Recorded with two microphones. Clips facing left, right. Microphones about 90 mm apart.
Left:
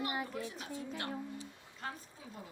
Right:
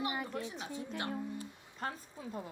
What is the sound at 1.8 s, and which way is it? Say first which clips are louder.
Speech: right 4 dB; 45° right (ahead or behind).